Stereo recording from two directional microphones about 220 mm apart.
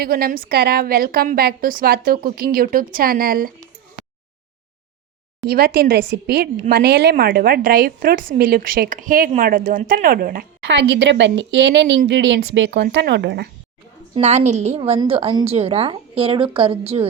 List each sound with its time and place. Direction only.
0.0 s a woman's voice: 40° right (ahead or behind)
5.5 s a woman's voice: 45° right (ahead or behind)
14.2 s a woman's voice: 30° right (ahead or behind)